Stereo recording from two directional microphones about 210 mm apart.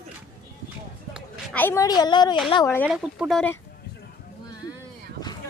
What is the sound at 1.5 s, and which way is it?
Speech, 10° left (ahead or behind).